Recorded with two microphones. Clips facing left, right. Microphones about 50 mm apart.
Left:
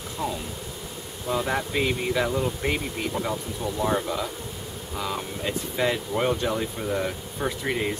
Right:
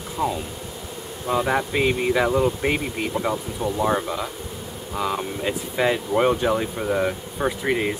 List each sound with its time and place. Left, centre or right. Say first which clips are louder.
0.2 s speech: right 5 dB; centre